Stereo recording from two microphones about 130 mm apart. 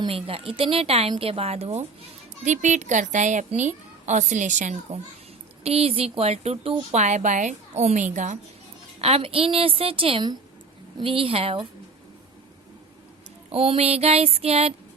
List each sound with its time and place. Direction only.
0.0 s a woman's voice: 45° right (ahead or behind)
2.4 s a woman's voice: 70° right (ahead or behind)
5.6 s a woman's voice: 50° right (ahead or behind)
6.9 s a woman's voice: 65° right (ahead or behind)
9.0 s a woman's voice: 50° right (ahead or behind)
13.5 s a woman's voice: 50° right (ahead or behind)